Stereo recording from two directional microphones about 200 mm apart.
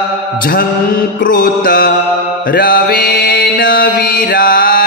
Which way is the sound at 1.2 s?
45° left (ahead or behind).